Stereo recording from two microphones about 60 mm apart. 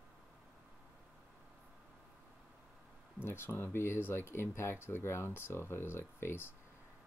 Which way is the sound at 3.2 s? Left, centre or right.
Left.